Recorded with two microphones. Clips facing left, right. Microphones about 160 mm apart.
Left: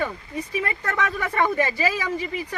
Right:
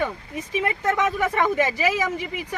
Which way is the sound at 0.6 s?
20° right (ahead or behind).